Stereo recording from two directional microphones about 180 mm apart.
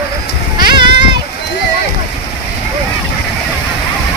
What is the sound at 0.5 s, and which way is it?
Goat, 25° right (ahead or behind).